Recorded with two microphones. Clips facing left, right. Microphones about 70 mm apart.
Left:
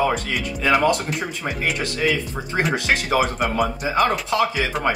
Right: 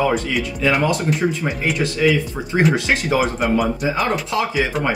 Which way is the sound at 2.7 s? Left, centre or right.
Left.